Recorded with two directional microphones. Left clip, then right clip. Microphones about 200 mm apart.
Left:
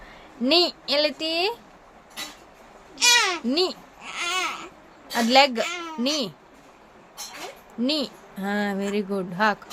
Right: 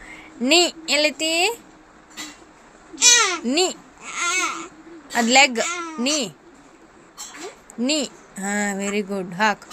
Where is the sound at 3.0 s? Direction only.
20° right (ahead or behind).